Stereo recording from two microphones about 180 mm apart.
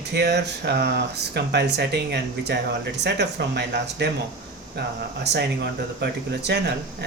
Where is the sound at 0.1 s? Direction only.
70° right (ahead or behind).